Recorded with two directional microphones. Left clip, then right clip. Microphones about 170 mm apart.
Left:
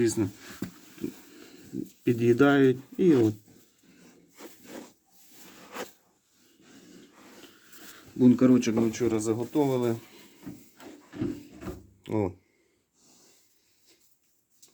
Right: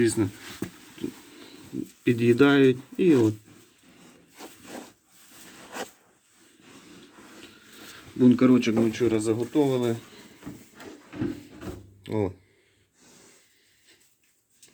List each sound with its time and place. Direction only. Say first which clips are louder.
0.0 s speech: right 3 dB; centre (ahead or behind)
0.6 s dog: right 3 dB; 10° left (ahead or behind)
2.0 s speech: right 2 dB; 5° left (ahead or behind)
7.4 s speech: right 4 dB; 5° left (ahead or behind)
12.0 s speech: right 1 dB; 15° left (ahead or behind)